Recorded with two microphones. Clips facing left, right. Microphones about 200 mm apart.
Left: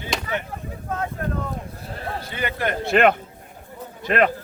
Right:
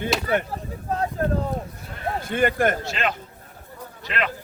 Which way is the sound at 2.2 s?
50° right (ahead or behind).